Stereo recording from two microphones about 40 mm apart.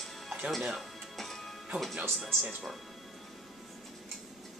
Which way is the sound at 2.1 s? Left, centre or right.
Centre.